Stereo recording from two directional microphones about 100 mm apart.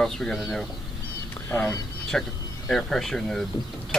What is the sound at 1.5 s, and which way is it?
Speech, 20° left (ahead or behind).